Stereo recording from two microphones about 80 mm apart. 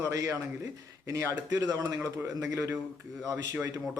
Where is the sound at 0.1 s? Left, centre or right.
Right.